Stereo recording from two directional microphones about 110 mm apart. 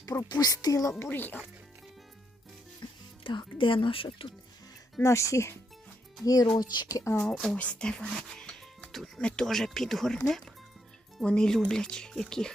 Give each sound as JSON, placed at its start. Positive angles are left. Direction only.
{"t": 0.0, "sound": "speech", "side_deg": 30}
{"t": 1.1, "sound": "speech", "side_deg": 15}
{"t": 2.8, "sound": "music", "side_deg": 40}
{"t": 3.2, "sound": "speech", "side_deg": 50}
{"t": 5.0, "sound": "speech", "side_deg": 30}
{"t": 7.3, "sound": "speech", "side_deg": 5}